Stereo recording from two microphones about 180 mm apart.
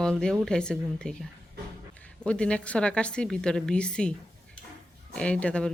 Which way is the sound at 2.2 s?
5° left (ahead or behind).